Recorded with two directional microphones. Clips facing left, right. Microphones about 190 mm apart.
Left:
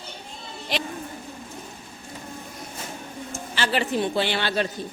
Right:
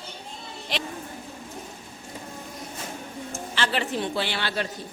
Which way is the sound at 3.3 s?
5° left (ahead or behind).